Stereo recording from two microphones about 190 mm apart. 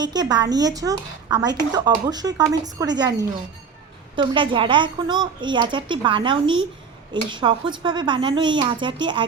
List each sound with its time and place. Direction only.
0.0 s speech: 20° right (ahead or behind)